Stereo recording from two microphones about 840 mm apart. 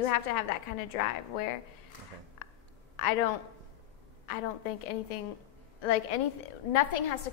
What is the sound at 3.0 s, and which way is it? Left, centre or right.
Speech, left.